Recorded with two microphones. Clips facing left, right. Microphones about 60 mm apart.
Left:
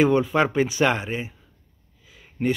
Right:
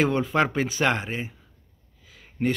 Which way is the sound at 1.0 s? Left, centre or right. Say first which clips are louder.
Left 2 dB; right.